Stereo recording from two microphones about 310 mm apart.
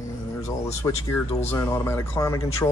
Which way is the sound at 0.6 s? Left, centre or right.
Centre.